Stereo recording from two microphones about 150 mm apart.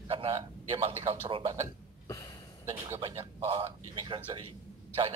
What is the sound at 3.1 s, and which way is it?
Speech, 20° right (ahead or behind).